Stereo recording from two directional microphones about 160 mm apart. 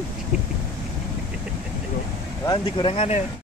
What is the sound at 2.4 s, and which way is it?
Speech, 35° left (ahead or behind).